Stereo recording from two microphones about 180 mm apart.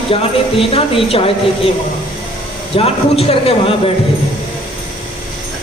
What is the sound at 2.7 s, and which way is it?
Speech, 30° left (ahead or behind).